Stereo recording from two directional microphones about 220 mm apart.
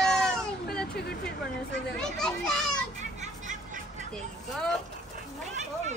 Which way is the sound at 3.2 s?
35° right (ahead or behind).